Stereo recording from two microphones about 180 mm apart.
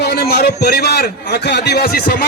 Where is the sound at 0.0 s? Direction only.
65° left (ahead or behind).